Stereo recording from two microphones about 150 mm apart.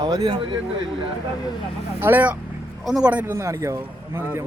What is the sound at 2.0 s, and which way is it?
Speech, 10° right (ahead or behind).